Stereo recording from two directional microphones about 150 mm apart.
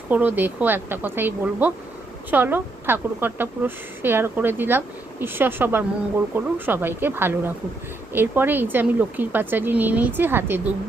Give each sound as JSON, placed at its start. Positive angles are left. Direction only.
{"t": 0.1, "sound": "speech", "side_deg": -10}